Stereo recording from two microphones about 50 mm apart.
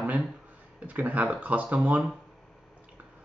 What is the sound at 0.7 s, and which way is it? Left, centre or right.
Speech, right.